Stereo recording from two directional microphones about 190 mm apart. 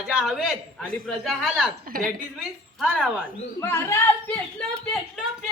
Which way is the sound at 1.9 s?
50° right (ahead or behind).